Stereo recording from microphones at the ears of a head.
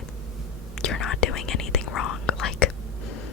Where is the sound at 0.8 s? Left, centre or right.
Left.